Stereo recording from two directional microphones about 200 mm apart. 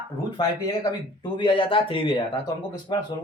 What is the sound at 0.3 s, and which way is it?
A man's voice, 20° left (ahead or behind).